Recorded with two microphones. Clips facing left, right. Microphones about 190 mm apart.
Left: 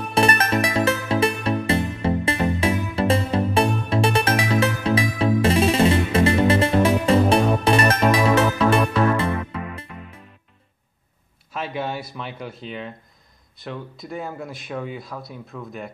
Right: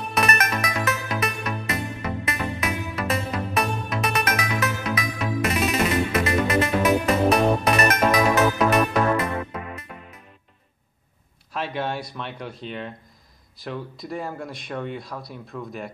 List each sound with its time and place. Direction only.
0.1 s music: 30° left (ahead or behind)
11.5 s speech: centre (ahead or behind)